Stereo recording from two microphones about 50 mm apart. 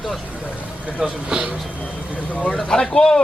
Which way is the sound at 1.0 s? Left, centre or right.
Centre.